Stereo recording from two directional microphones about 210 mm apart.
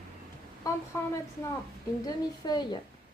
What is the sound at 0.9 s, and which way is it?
Speech, 15° left (ahead or behind).